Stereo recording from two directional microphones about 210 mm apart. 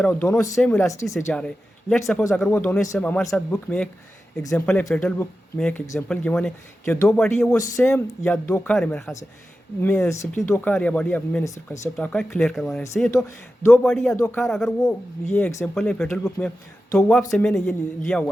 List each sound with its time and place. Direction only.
0.0 s speech: 10° left (ahead or behind)
1.1 s speech: 5° left (ahead or behind)
7.5 s speech: 15° left (ahead or behind)
12.8 s speech: 15° left (ahead or behind)
13.8 s speech: centre (ahead or behind)
14.2 s speech: 10° left (ahead or behind)
14.4 s speech: centre (ahead or behind)
14.8 s speech: 15° left (ahead or behind)